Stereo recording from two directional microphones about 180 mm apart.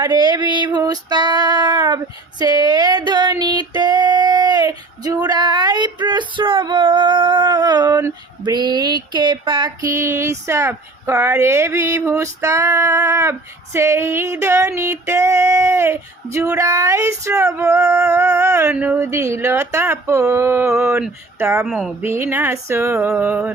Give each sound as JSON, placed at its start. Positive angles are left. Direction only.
{"t": 0.0, "sound": "female singing", "side_deg": -25}
{"t": 2.4, "sound": "a sound", "side_deg": -25}
{"t": 13.7, "sound": "music", "side_deg": -15}
{"t": 21.7, "sound": "speech", "side_deg": 0}
{"t": 22.0, "sound": "music", "side_deg": -15}